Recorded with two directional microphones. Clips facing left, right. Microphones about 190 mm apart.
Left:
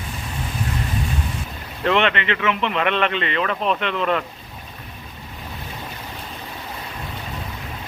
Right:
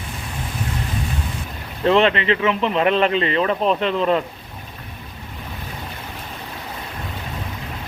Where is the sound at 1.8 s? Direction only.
35° right (ahead or behind).